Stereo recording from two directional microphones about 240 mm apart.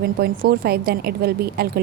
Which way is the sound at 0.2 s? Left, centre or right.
Right.